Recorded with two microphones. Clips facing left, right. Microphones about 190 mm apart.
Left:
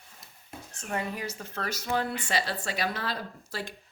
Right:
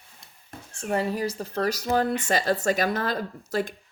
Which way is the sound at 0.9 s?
35° right (ahead or behind).